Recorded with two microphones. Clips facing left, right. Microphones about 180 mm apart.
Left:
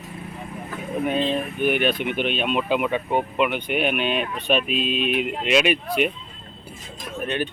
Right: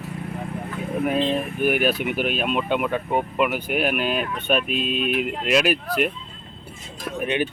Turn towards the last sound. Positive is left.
turn(degrees=-15)  # may be behind; listen again after turning